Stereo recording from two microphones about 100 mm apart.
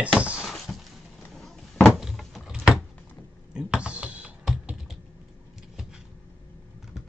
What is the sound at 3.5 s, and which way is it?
Computer keyboard, 10° right (ahead or behind).